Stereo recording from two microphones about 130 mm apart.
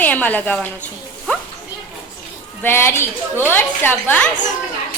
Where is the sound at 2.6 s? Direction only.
15° left (ahead or behind).